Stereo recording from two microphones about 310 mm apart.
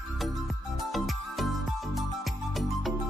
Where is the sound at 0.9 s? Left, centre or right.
Centre.